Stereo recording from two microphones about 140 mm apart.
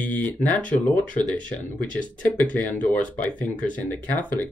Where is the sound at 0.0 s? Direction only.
10° left (ahead or behind).